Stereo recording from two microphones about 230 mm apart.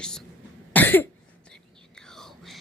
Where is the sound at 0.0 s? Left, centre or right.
Centre.